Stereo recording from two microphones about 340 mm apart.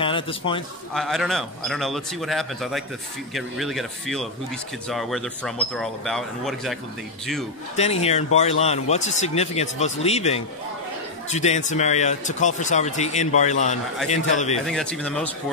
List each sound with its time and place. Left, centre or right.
0.0 s a man's voice: centre
0.9 s speech: centre
7.7 s speech: centre
14.7 s speech: centre